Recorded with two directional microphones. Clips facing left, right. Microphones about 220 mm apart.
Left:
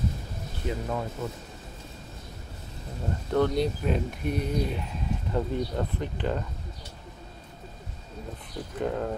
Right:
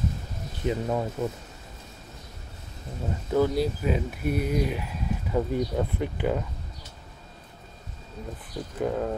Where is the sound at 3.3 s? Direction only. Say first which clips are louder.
Right 1 dB; 5° right (ahead or behind).